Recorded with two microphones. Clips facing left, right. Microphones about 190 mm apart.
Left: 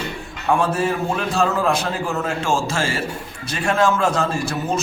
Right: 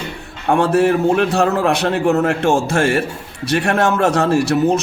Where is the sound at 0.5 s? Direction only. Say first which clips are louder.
Right 6 dB; 70° right (ahead or behind).